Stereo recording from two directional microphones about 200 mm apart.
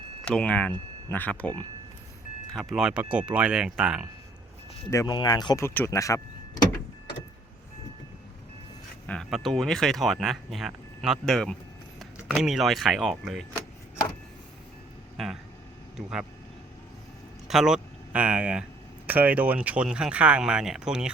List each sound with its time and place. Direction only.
0.3 s speech: 5° left (ahead or behind)
4.9 s speech: 20° left (ahead or behind)
9.0 s speech: centre (ahead or behind)
16.0 s speech: 5° right (ahead or behind)
17.5 s speech: centre (ahead or behind)